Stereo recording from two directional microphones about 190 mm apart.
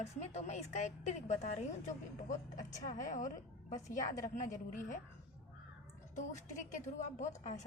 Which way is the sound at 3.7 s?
15° left (ahead or behind).